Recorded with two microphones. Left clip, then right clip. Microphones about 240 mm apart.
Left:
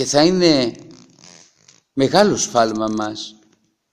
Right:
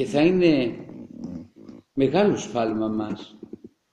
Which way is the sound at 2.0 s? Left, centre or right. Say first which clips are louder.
Left 6 dB; left.